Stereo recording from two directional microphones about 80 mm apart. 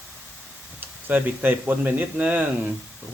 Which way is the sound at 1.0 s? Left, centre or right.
Right.